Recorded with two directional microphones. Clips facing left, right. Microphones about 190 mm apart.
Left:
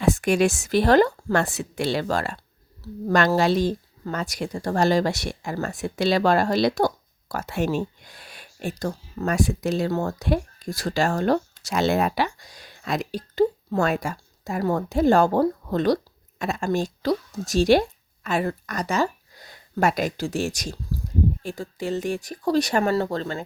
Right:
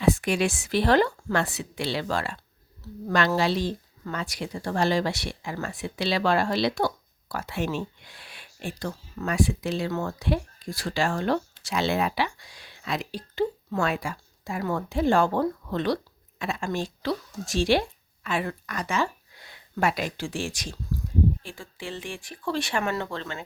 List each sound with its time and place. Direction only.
0.0 s speech: 45° left (ahead or behind)